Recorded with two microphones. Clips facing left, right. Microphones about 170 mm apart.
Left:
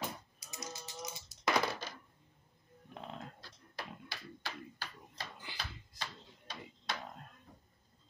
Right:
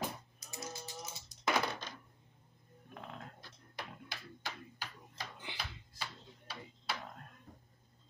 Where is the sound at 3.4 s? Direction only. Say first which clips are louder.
Left 1 dB; 20° right (ahead or behind).